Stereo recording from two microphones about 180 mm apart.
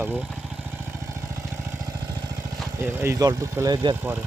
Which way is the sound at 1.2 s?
15° right (ahead or behind).